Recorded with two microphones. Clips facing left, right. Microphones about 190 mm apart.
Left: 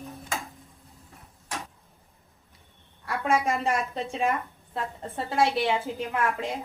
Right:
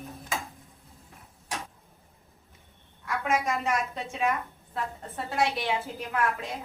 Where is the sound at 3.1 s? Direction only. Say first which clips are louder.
Left 3 dB; 30° left (ahead or behind).